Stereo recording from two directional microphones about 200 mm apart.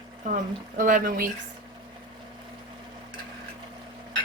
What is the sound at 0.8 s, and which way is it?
Speech, 45° right (ahead or behind).